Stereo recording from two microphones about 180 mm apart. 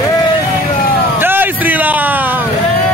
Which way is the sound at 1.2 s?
10° right (ahead or behind).